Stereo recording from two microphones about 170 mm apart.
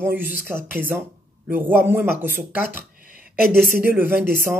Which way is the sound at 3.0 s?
55° right (ahead or behind).